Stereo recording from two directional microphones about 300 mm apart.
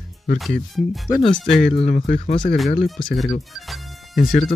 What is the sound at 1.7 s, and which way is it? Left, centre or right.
Speech, centre.